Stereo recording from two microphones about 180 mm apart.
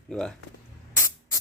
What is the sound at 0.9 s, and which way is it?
Spray, 15° left (ahead or behind).